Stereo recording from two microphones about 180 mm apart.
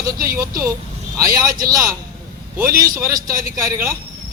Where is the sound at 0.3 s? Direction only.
15° right (ahead or behind).